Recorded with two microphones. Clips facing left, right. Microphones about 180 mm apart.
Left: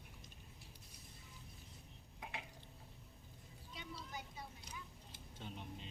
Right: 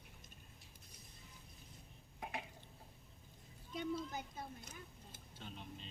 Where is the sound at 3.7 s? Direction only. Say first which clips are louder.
Right 9 dB; 50° right (ahead or behind).